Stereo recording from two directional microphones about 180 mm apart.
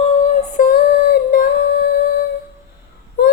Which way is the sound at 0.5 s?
55° left (ahead or behind).